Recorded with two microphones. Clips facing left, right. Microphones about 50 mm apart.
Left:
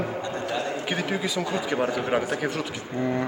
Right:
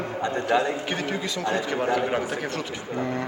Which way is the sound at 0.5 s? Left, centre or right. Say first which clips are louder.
Right 8 dB; right.